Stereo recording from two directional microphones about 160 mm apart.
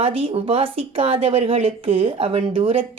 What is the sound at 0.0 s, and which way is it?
Speech, 35° right (ahead or behind).